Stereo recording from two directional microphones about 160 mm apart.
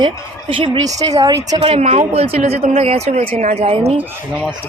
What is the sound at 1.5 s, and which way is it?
Speech, 35° right (ahead or behind).